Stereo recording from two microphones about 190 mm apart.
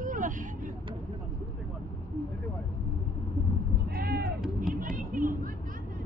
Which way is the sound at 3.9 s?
50° right (ahead or behind).